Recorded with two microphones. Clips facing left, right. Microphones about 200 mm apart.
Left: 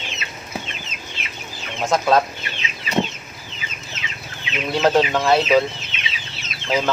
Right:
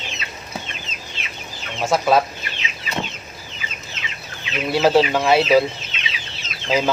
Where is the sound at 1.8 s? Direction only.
5° right (ahead or behind).